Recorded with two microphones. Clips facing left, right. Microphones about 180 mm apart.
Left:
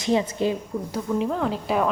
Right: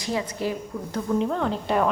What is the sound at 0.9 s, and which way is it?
Speech, 5° left (ahead or behind).